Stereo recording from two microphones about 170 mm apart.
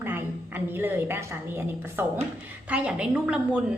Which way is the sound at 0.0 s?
10° right (ahead or behind).